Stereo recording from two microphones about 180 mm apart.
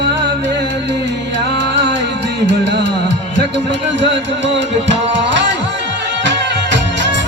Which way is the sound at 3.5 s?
85° right.